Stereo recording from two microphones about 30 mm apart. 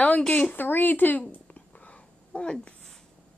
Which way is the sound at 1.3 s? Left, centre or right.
Left.